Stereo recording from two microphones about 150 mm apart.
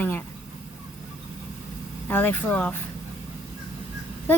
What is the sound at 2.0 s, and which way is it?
Speech, 15° left (ahead or behind).